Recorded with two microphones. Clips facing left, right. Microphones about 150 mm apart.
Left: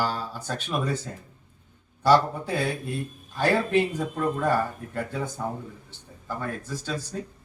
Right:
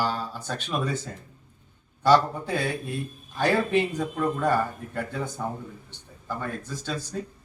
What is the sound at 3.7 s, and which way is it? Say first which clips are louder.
Speech: left 1 dB; 5° left (ahead or behind).